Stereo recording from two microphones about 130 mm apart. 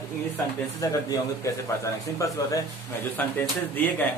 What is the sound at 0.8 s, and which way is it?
Speech, 25° left (ahead or behind).